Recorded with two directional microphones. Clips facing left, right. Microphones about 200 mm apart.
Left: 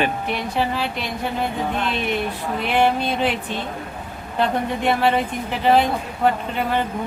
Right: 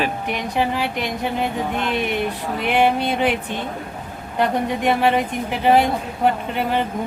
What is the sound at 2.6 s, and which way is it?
Speech, 15° right (ahead or behind).